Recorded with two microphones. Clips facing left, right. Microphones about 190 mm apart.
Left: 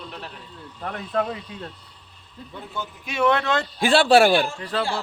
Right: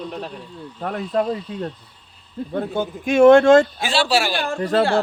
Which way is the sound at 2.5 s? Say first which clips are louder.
Right 11 dB; 60° right (ahead or behind).